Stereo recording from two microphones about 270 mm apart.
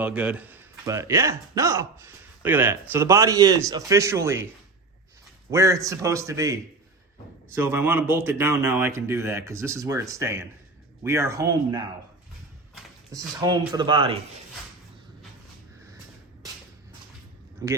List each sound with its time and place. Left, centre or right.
0.0 s speech: centre
5.5 s speech: centre
13.1 s speech: centre
17.6 s speech: centre